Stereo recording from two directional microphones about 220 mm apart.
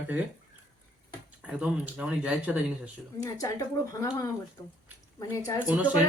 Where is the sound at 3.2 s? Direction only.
15° left (ahead or behind).